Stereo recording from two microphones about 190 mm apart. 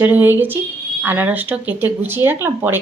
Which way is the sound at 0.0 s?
10° right (ahead or behind).